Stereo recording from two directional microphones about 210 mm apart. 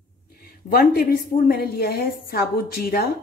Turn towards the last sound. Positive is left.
turn(degrees=45)  # may be behind; listen again after turning